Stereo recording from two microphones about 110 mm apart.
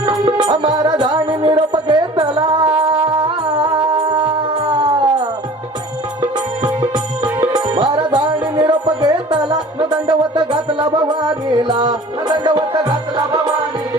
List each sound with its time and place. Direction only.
0.0 s music: 40° right (ahead or behind)
4.2 s howl: 40° right (ahead or behind)
6.6 s music: 45° right (ahead or behind)
7.3 s music: 10° right (ahead or behind)
7.5 s music: 45° right (ahead or behind)